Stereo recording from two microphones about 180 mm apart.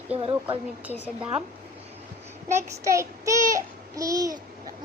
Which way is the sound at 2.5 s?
15° right (ahead or behind).